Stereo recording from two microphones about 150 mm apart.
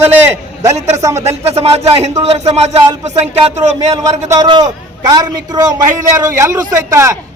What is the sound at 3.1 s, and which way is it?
Speech, 50° right (ahead or behind).